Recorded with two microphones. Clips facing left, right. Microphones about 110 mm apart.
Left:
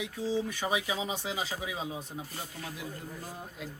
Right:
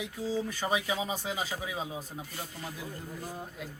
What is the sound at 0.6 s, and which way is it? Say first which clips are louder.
Speech: right 1 dB; 10° left (ahead or behind).